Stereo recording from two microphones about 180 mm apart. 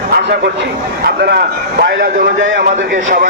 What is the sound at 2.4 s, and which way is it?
Speech, 90° right.